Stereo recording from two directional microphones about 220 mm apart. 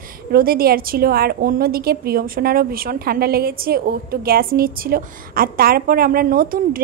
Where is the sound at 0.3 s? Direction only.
40° right (ahead or behind).